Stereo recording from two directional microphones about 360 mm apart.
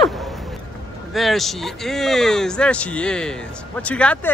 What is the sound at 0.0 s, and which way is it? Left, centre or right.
Vehicle, centre.